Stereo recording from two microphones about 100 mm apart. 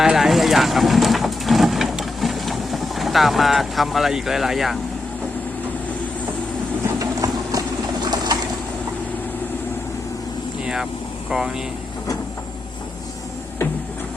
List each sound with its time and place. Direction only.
0.0 s speech: 5° right (ahead or behind)
7.0 s engine: 35° right (ahead or behind)
8.0 s bird: 45° right (ahead or behind)
11.3 s speech: 5° right (ahead or behind)